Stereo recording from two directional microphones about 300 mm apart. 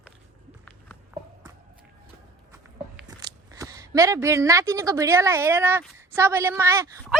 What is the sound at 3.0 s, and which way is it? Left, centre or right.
Speech, centre.